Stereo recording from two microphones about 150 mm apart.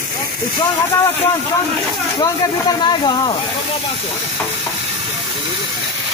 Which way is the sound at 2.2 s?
25° left (ahead or behind).